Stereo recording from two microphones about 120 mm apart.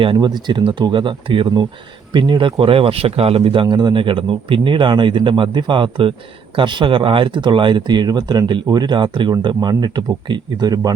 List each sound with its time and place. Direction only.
0.0 s speech: 40° right (ahead or behind)